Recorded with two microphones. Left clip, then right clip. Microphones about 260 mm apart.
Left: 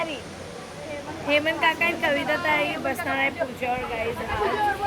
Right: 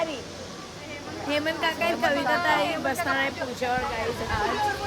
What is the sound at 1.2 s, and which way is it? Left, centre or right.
Speech, centre.